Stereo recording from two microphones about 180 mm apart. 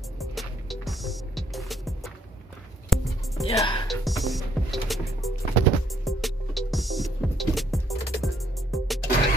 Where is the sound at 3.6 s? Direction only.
25° left (ahead or behind).